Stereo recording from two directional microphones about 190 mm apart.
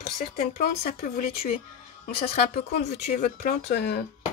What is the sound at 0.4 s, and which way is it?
Speech, 55° left (ahead or behind).